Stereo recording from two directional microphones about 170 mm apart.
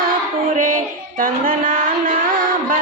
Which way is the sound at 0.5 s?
50° right (ahead or behind).